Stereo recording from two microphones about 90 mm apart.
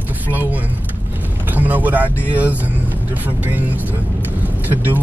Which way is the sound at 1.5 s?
20° right (ahead or behind).